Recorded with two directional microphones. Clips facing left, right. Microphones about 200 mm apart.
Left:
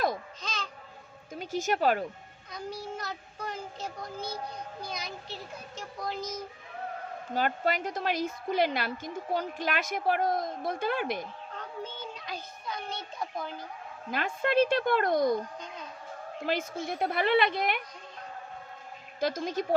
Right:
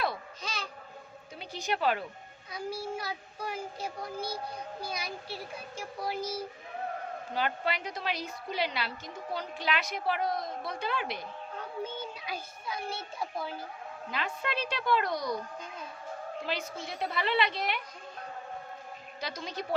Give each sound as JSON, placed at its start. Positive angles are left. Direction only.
{"t": 0.4, "sound": "babbling", "side_deg": -10}
{"t": 1.4, "sound": "a woman's voice", "side_deg": 45}
{"t": 2.5, "sound": "a child's voice", "side_deg": -10}
{"t": 7.3, "sound": "a woman's voice", "side_deg": 45}
{"t": 11.5, "sound": "a child's voice", "side_deg": -10}
{"t": 14.1, "sound": "a woman's voice", "side_deg": 50}
{"t": 16.5, "sound": "a woman's voice", "side_deg": 50}
{"t": 19.2, "sound": "a woman's voice", "side_deg": 50}